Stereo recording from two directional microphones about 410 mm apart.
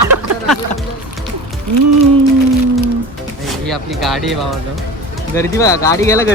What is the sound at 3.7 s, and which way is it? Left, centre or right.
Speech, centre.